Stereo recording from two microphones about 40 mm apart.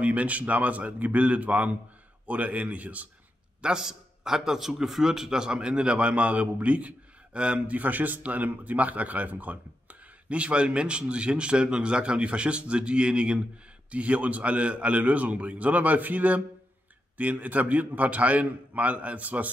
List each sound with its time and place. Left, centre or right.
0.0 s a man's voice: right
3.6 s a man's voice: centre; by 19.5 s right